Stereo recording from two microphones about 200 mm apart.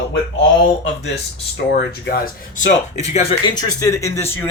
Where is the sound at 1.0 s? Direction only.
55° left (ahead or behind).